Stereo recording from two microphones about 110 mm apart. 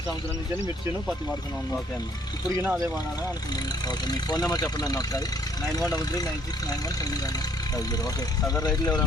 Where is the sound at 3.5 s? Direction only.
35° left (ahead or behind).